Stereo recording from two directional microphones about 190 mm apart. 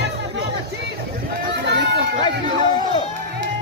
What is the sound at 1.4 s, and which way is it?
Run, 55° right (ahead or behind).